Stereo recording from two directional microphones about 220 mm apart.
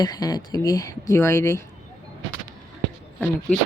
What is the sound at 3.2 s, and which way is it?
Speech, 10° left (ahead or behind).